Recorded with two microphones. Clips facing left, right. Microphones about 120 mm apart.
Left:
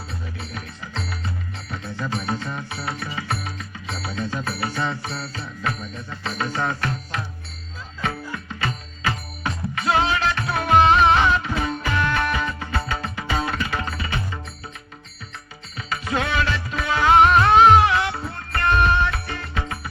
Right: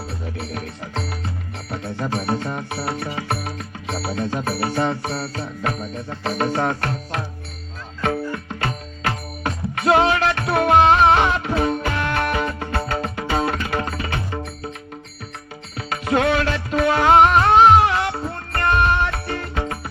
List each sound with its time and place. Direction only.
0.1 s music: 55° right (ahead or behind)
3.0 s music: 50° right (ahead or behind)
15.8 s music: 55° right (ahead or behind)
17.2 s music: 35° right (ahead or behind)